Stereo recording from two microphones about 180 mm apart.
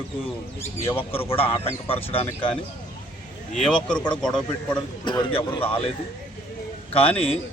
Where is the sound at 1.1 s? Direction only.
30° left (ahead or behind).